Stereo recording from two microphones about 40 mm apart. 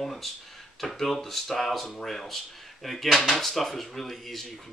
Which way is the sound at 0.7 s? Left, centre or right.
Centre.